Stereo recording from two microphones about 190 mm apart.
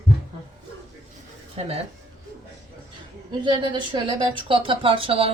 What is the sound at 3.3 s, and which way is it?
Speech, 25° right (ahead or behind).